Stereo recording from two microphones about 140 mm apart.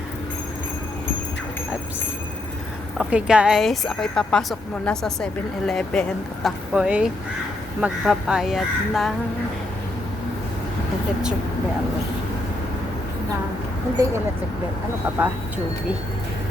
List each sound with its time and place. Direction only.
3.0 s a woman's voice: 5° right (ahead or behind)
6.7 s a woman's voice: 5° right (ahead or behind)
14.0 s speech: 20° right (ahead or behind)